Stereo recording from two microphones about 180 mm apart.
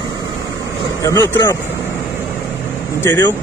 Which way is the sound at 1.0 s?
15° left (ahead or behind).